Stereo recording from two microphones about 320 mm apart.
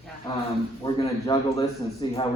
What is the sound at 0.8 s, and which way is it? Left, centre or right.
A man's voice, centre.